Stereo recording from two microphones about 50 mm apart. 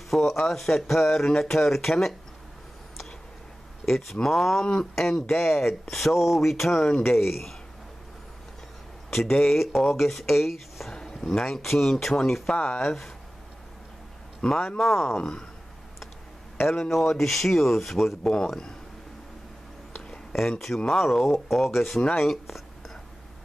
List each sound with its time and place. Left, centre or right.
0.1 s speech: centre
3.8 s speech: centre
9.1 s speech: centre
10.9 s speech: centre
12.5 s speech: left
12.8 s speech: centre
14.4 s speech: centre
14.8 s speech: centre
15.1 s speech: centre
16.9 s speech: centre
18.2 s speech: centre
20.3 s speech: centre